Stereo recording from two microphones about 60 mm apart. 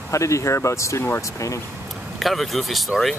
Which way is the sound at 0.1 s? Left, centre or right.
Left.